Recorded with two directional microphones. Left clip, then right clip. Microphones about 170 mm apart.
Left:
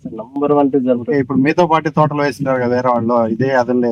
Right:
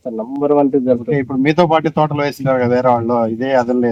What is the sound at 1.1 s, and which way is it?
Speech, 15° right (ahead or behind).